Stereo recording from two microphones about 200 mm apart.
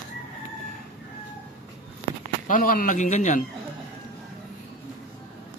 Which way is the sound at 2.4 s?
40° left (ahead or behind).